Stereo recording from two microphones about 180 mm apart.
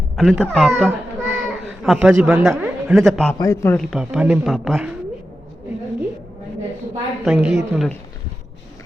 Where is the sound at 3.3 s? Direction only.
15° left (ahead or behind).